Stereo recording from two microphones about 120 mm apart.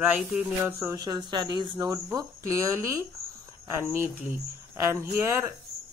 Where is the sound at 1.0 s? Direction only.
35° right (ahead or behind).